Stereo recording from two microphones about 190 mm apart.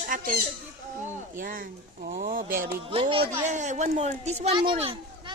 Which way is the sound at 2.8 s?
30° right (ahead or behind).